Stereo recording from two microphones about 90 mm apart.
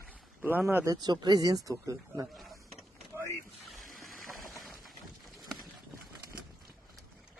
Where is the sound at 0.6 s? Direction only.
25° right (ahead or behind).